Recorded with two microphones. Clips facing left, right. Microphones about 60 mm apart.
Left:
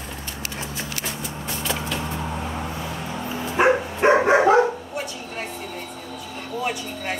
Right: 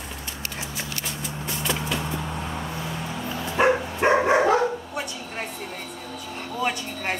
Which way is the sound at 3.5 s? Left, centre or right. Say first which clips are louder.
Left 2 dB; centre.